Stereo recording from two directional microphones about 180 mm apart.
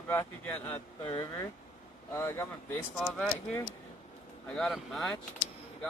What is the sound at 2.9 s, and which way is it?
Speech, centre (ahead or behind).